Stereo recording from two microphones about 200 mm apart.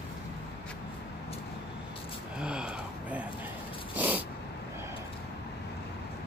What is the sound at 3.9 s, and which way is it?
Snort, 10° right (ahead or behind).